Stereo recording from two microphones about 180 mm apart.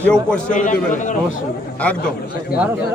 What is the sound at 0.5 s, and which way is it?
Speech, 45° left (ahead or behind).